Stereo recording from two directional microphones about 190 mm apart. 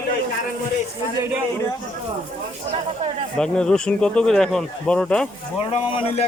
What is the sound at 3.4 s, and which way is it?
Speech, 5° left (ahead or behind).